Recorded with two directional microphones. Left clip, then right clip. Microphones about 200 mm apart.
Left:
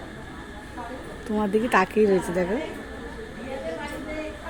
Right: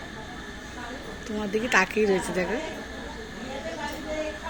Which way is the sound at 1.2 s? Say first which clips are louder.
Left 5 dB; 30° left (ahead or behind).